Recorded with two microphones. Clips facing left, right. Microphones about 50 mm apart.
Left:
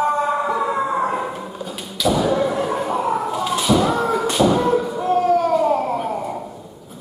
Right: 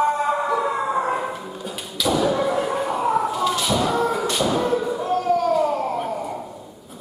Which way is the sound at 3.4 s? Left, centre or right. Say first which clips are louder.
Left 3 dB; centre.